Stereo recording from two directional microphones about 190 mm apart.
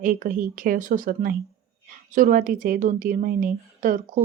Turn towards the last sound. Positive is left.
turn(degrees=-45)  # may be behind; listen again after turning